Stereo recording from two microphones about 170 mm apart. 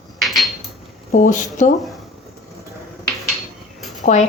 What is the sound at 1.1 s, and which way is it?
Speech, 50° left (ahead or behind).